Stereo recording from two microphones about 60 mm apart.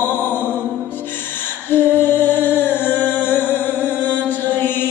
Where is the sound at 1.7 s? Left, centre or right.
Left.